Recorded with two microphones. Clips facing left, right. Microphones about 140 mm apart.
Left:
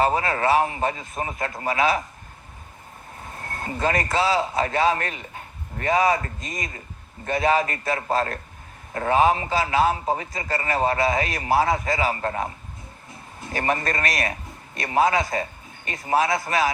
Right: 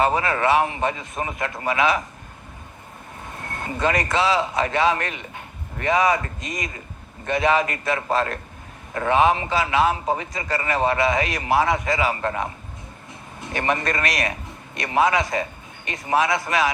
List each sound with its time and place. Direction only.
0.0 s a man's voice: 30° left (ahead or behind)
3.4 s vehicle: 30° left (ahead or behind)
3.8 s a man's voice: 30° left (ahead or behind)
13.1 s vehicle: 25° right (ahead or behind)
13.6 s a man's voice: 30° left (ahead or behind)